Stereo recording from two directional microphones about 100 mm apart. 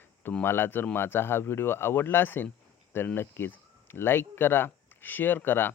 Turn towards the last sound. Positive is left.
turn(degrees=20)  # may be behind; listen again after turning